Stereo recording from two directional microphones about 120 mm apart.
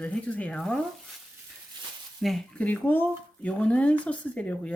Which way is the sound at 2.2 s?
Centre (ahead or behind).